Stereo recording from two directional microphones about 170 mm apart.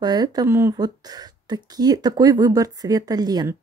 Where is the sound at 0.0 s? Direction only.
25° right (ahead or behind).